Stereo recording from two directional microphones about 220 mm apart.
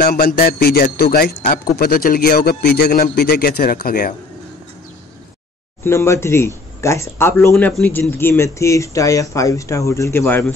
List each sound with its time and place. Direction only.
0.0 s a man's voice: 40° left (ahead or behind)
5.9 s speech: 10° left (ahead or behind)